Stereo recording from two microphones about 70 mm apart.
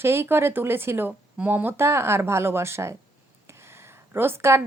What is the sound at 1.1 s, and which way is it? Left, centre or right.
A woman's voice, right.